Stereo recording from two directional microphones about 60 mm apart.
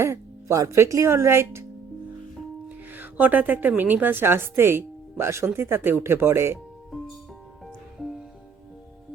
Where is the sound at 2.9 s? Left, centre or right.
Right.